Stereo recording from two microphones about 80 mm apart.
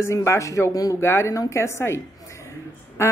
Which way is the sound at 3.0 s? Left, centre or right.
Left.